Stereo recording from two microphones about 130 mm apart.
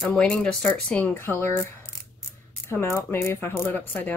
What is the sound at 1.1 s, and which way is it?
Speech, 20° left (ahead or behind).